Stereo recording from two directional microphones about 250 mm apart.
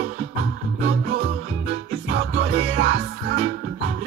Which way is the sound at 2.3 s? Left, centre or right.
Right.